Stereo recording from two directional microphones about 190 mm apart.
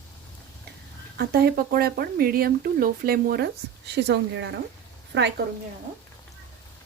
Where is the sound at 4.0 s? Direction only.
65° right (ahead or behind).